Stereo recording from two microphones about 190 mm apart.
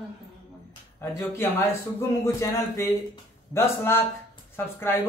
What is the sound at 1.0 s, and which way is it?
Speech, 15° left (ahead or behind).